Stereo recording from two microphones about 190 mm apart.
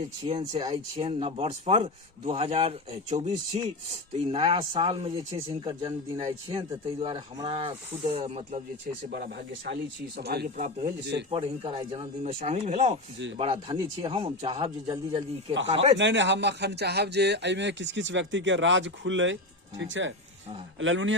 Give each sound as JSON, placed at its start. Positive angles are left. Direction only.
{"t": 0.3, "sound": "speech", "side_deg": -30}
{"t": 9.0, "sound": "speech", "side_deg": -55}
{"t": 11.3, "sound": "speech", "side_deg": -30}
{"t": 16.0, "sound": "speech", "side_deg": -70}
{"t": 20.7, "sound": "a man's voice", "side_deg": -85}